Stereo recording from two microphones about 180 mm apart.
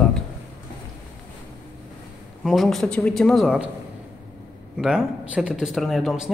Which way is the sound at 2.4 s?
Centre (ahead or behind).